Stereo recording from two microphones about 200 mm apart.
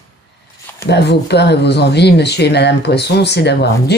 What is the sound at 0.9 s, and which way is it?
Speech, 55° left (ahead or behind).